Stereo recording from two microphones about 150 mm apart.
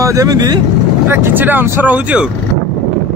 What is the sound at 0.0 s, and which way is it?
Speech, 20° right (ahead or behind).